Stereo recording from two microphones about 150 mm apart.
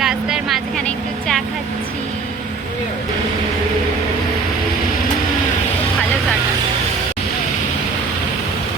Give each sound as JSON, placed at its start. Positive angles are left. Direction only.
{"t": 0.0, "sound": "vehicle", "side_deg": -5}